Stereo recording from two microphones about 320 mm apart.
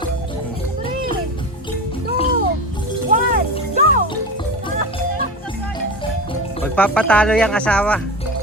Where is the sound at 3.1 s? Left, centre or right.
Right.